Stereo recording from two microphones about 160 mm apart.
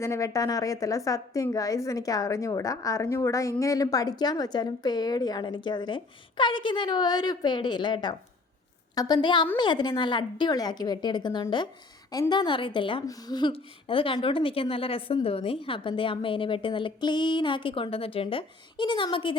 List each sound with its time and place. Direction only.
0.0 s a woman's voice: 20° left (ahead or behind)